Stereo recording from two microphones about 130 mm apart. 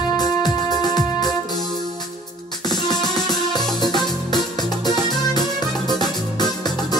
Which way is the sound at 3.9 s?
35° left (ahead or behind).